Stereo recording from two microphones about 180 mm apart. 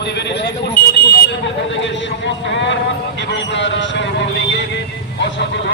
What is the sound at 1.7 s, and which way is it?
A man's voice, 90° left.